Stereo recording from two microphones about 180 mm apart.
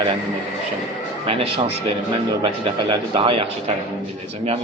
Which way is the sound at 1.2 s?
35° right (ahead or behind).